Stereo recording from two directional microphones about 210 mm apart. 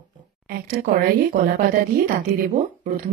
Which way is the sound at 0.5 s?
45° right (ahead or behind).